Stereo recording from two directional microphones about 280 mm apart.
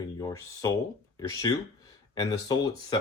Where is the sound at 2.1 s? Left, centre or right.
Centre.